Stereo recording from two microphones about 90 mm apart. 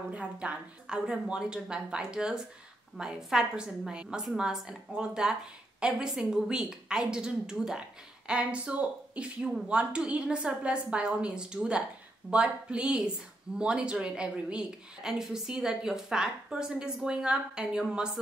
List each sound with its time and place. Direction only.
0.1 s a woman's voice: 15° right (ahead or behind)